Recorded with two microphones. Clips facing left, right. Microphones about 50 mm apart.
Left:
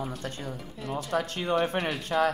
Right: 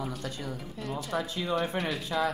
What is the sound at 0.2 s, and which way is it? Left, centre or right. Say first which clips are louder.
Speech: even; left.